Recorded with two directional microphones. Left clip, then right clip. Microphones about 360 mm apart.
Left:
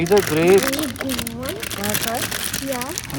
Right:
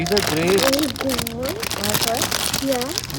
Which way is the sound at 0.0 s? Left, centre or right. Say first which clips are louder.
Left 3 dB; right.